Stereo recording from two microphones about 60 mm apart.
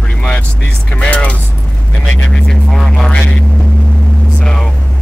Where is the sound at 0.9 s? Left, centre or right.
Left.